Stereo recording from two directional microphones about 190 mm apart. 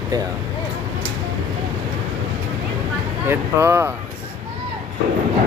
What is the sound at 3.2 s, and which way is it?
Speech, 10° right (ahead or behind).